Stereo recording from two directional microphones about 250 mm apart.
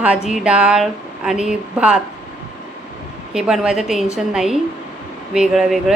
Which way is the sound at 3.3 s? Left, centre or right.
Centre.